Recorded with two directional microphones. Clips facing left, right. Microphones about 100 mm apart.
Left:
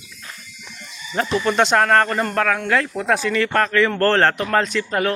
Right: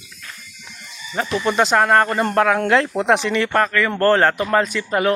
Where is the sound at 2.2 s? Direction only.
20° right (ahead or behind).